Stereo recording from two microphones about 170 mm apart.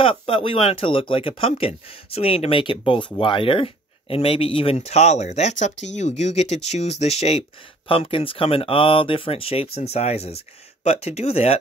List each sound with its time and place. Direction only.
0.0 s speech: 35° left (ahead or behind)